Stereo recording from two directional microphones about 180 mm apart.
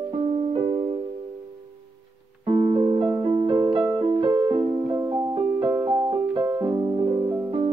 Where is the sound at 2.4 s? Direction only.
30° right (ahead or behind).